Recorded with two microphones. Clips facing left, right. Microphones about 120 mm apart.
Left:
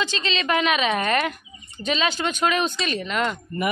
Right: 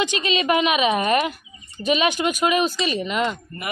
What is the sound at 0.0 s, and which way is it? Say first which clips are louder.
Speech: right 4 dB; 15° right (ahead or behind).